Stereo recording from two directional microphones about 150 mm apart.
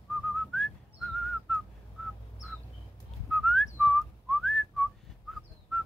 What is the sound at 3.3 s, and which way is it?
Whistling, centre (ahead or behind).